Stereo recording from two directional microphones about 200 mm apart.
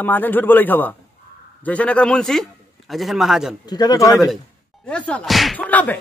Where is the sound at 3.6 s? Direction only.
20° left (ahead or behind).